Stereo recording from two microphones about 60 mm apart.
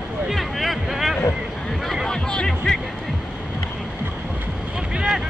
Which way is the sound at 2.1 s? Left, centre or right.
Centre.